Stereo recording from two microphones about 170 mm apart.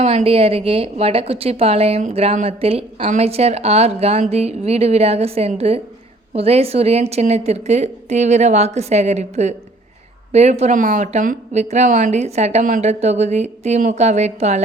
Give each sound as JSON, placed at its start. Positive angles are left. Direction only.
{"t": 0.0, "sound": "speech", "side_deg": -35}